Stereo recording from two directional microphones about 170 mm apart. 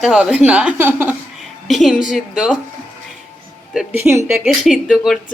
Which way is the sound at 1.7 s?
Centre (ahead or behind).